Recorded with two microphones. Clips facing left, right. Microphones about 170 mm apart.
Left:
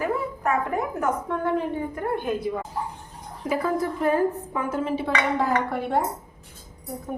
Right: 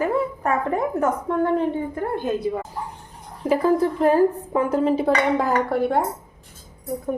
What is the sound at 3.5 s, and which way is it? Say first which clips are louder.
Speech: right 6 dB; 30° right (ahead or behind).